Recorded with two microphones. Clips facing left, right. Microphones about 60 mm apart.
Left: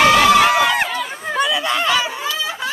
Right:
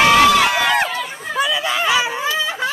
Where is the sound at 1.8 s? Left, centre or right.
Centre.